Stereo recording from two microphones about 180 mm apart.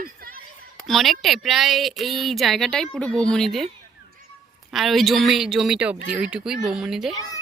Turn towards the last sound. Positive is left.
turn(degrees=20)  # may be behind; listen again after turning